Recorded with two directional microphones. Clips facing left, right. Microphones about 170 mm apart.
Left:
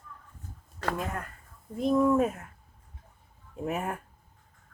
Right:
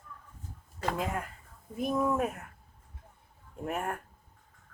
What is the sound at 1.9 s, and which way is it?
Speech, 5° right (ahead or behind).